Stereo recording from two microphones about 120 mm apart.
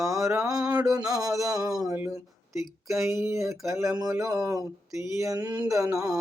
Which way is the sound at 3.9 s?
30° right (ahead or behind).